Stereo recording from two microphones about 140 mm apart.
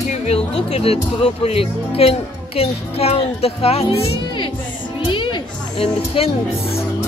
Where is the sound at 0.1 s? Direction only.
50° left (ahead or behind).